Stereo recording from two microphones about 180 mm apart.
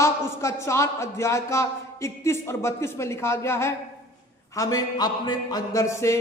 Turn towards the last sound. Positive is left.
turn(degrees=15)  # may be behind; listen again after turning